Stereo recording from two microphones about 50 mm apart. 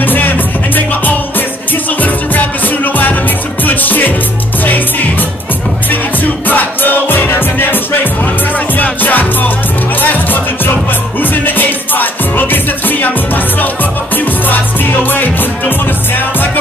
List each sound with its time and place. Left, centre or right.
0.0 s music: left
2.0 s music: left
6.4 s music: left